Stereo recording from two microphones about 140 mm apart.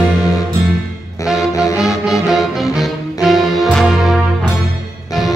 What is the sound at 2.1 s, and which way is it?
Music, centre (ahead or behind).